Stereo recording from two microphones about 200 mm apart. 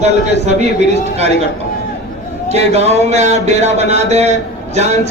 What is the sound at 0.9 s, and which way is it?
Speech, 30° right (ahead or behind).